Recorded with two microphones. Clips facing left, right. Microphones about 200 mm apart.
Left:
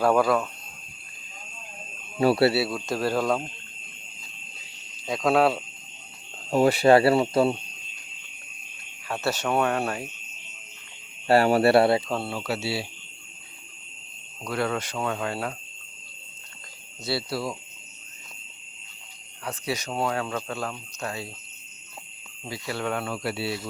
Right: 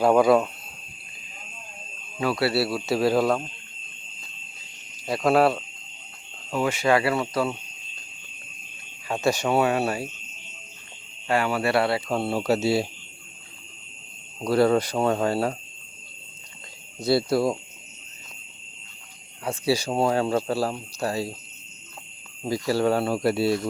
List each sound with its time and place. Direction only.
0.0 s speech: 15° right (ahead or behind)
2.1 s speech: 30° left (ahead or behind)
2.6 s speech: 5° right (ahead or behind)
5.0 s speech: centre (ahead or behind)
6.5 s speech: 35° left (ahead or behind)
9.0 s speech: 15° right (ahead or behind)
11.3 s speech: 40° left (ahead or behind)
12.3 s speech: 40° right (ahead or behind)
14.4 s speech: 35° right (ahead or behind)
17.1 s speech: 50° right (ahead or behind)
19.5 s speech: 30° right (ahead or behind)
22.4 s speech: 40° right (ahead or behind)